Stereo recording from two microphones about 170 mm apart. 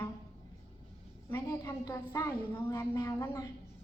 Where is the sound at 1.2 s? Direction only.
15° left (ahead or behind).